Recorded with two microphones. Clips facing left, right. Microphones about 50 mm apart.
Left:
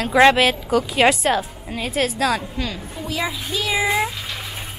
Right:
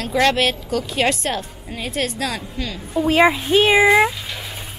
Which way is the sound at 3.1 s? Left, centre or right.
Right.